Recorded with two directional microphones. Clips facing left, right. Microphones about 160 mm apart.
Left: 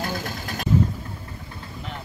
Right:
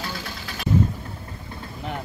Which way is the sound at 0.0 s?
45° left (ahead or behind).